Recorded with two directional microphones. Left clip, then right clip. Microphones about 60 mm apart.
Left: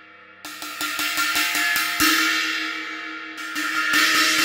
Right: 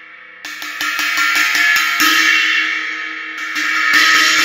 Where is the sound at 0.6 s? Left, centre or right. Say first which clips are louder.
Right 8 dB; centre.